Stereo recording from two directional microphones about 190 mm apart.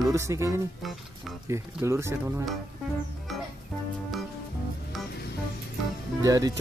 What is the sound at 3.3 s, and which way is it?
Music, centre (ahead or behind).